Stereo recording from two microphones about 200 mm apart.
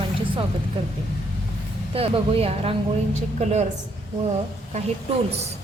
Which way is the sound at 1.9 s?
30° right (ahead or behind).